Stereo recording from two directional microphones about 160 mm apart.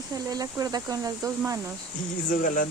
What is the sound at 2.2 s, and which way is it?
Speech, 55° left (ahead or behind).